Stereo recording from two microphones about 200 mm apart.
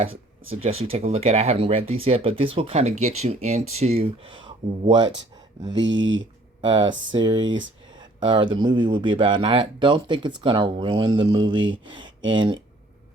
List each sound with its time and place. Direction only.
0.5 s speech: 30° right (ahead or behind)
5.7 s speech: 70° right (ahead or behind)
6.7 s speech: 20° right (ahead or behind)